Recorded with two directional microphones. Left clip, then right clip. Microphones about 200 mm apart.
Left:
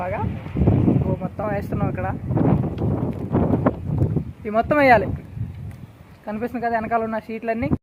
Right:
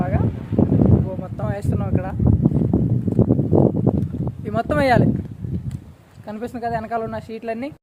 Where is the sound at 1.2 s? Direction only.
Centre (ahead or behind).